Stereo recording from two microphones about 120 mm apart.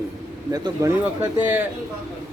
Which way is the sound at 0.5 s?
30° right (ahead or behind).